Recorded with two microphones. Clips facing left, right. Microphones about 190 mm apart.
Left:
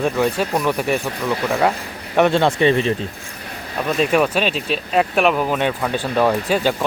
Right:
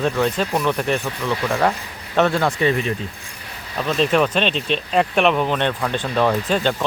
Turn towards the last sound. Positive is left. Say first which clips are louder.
# left 1 dB
turn(degrees=10)  # may be behind; listen again after turning